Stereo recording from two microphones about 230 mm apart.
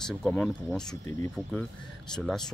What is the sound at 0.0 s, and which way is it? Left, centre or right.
Speech, centre.